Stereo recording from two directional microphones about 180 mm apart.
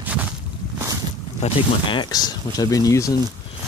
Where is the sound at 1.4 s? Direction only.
25° left (ahead or behind).